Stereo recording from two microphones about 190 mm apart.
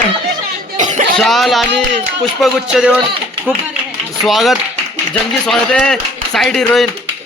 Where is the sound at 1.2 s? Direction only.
Centre (ahead or behind).